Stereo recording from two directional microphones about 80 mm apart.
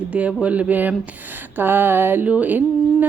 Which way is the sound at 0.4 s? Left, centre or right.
Centre.